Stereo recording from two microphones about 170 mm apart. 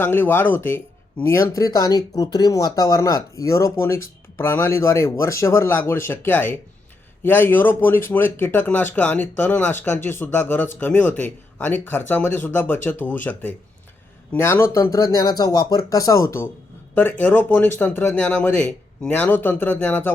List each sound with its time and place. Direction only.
0.0 s speech: 10° left (ahead or behind)